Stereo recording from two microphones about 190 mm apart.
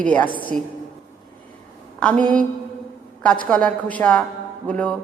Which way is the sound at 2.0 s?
5° left (ahead or behind).